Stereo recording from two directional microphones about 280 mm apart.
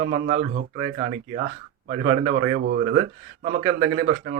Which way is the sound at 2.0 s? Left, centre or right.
Right.